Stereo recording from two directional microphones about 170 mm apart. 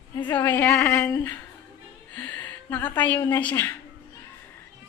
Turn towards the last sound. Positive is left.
turn(degrees=10)  # may be behind; listen again after turning